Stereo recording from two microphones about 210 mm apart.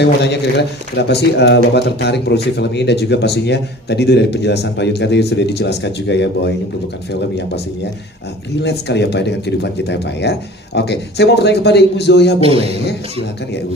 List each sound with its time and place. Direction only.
0.0 s a man's voice: 55° left (ahead or behind)
8.6 s a man's voice: 55° left (ahead or behind)
12.4 s speech: 30° right (ahead or behind)